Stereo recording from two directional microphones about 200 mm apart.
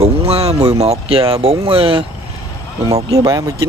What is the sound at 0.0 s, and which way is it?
Speech, 30° right (ahead or behind).